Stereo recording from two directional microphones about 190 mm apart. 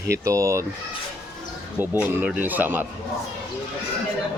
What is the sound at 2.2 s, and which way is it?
Speech, 10° right (ahead or behind).